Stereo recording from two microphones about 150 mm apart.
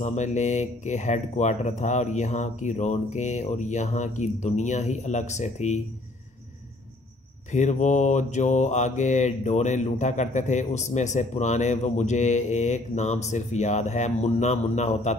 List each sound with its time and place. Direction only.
0.0 s mantra: 50° left (ahead or behind)
7.5 s mantra: 55° left (ahead or behind)